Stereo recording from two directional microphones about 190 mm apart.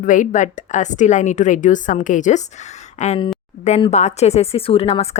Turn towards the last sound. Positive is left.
turn(degrees=30)  # may be behind; listen again after turning